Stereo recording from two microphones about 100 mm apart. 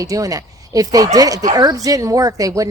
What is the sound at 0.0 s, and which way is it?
A woman's voice, 35° right (ahead or behind).